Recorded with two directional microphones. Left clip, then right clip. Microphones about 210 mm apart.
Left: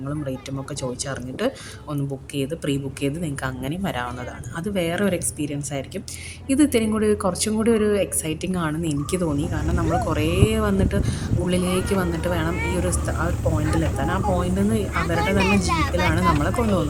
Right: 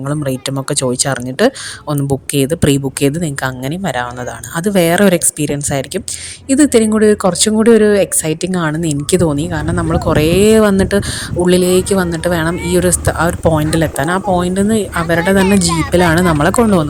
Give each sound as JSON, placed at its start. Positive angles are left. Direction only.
{"t": 0.1, "sound": "speech", "side_deg": -40}